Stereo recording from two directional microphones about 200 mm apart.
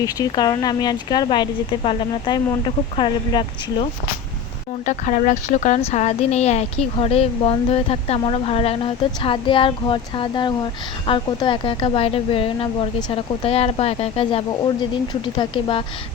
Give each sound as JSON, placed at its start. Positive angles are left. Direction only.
{"t": 0.0, "sound": "a woman's voice", "side_deg": 20}
{"t": 4.9, "sound": "a woman's voice", "side_deg": 35}